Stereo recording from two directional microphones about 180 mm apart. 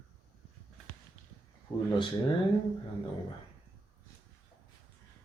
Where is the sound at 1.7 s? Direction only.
25° left (ahead or behind).